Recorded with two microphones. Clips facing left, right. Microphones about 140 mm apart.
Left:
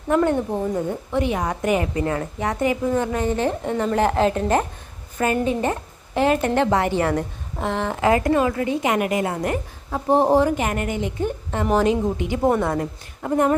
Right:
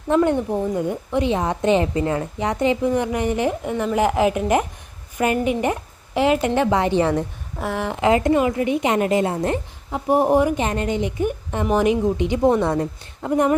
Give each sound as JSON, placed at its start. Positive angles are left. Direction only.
{"t": 0.1, "sound": "a woman's voice", "side_deg": -20}
{"t": 10.1, "sound": "speech", "side_deg": 25}
{"t": 10.3, "sound": "a woman's voice", "side_deg": -15}